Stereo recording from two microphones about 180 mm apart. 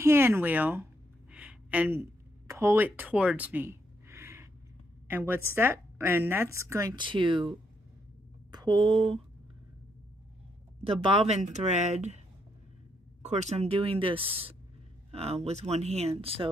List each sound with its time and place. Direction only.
0.0 s a woman's voice: 15° right (ahead or behind)
1.3 s a sound: 10° right (ahead or behind)
5.0 s a woman's voice: 10° right (ahead or behind); by 9.2 s 30° right (ahead or behind)
10.8 s speech: 30° right (ahead or behind)
13.2 s speech: 40° right (ahead or behind)